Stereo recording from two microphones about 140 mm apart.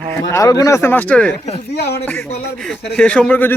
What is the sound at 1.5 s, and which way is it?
Speech, 50° left (ahead or behind).